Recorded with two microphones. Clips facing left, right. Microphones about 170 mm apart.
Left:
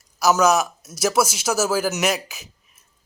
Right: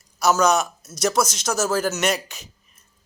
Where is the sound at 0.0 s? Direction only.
5° left (ahead or behind).